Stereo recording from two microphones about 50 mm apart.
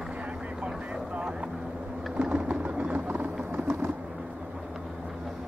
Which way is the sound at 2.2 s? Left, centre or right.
Right.